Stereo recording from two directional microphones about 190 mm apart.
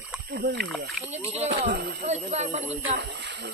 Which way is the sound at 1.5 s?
60° right (ahead or behind).